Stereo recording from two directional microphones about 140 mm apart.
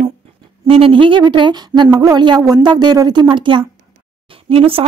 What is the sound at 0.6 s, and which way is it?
A woman's voice, 40° right (ahead or behind).